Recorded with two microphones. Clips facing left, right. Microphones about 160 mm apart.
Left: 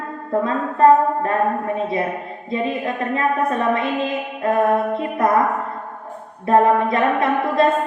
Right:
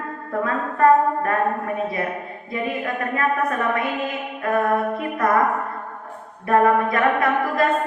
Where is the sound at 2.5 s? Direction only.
25° left (ahead or behind).